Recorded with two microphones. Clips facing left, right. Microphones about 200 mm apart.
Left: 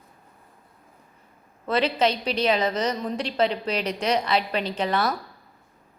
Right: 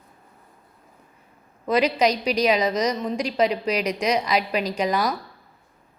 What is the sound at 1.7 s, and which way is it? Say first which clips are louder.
A woman's voice: right 2 dB; 10° right (ahead or behind).